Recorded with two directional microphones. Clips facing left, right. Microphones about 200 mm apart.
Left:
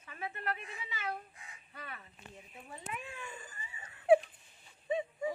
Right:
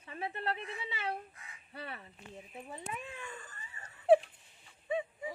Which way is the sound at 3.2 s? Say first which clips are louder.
Even; 10° left (ahead or behind).